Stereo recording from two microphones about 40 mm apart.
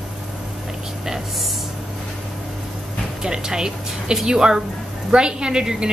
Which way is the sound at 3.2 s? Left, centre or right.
Centre.